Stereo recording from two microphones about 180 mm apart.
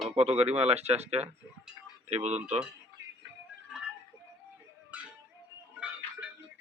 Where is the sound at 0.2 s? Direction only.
35° right (ahead or behind).